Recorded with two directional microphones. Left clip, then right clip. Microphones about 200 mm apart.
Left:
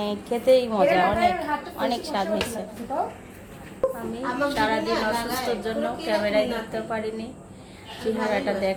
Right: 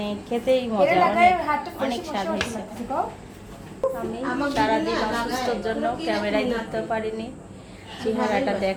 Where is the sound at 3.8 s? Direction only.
Centre (ahead or behind).